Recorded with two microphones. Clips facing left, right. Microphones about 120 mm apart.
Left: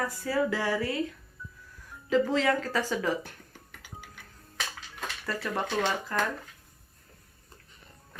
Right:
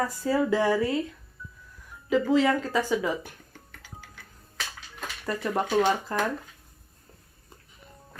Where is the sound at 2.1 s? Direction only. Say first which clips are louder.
Right 3 dB; 10° right (ahead or behind).